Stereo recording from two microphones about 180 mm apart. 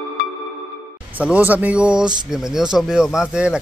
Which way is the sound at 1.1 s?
10° right (ahead or behind).